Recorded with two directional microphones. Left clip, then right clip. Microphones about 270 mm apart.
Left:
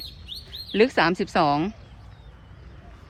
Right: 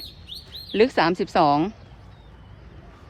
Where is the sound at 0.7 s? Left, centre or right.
Centre.